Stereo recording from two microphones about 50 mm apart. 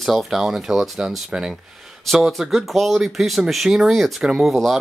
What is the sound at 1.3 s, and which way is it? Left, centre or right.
Speech, centre.